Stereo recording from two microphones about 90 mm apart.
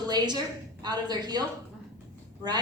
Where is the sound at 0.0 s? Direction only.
50° right (ahead or behind).